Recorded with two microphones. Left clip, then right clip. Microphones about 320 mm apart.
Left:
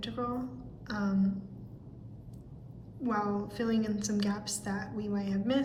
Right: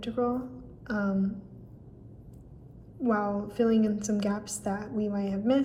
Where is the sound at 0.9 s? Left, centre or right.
Centre.